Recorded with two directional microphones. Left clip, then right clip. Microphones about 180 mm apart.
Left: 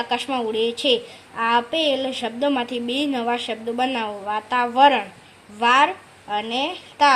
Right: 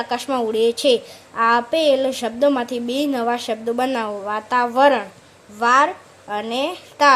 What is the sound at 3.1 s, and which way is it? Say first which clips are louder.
A woman's voice: right 2 dB; 10° right (ahead or behind).